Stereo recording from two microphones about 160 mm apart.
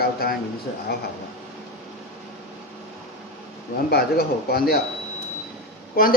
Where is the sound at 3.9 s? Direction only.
75° left (ahead or behind).